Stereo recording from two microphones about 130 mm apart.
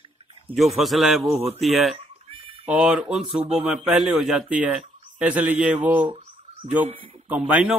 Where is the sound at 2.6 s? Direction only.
10° right (ahead or behind).